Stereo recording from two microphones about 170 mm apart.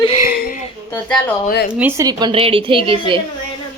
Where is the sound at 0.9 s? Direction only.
10° left (ahead or behind).